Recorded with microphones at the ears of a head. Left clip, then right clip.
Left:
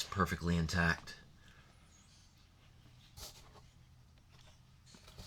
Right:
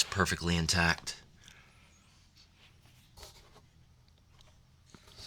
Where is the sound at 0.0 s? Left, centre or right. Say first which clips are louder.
Right 6 dB; right.